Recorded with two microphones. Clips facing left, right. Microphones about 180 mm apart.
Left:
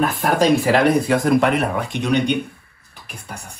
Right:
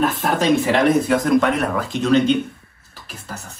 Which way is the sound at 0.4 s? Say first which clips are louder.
Left 1 dB; 35° left (ahead or behind).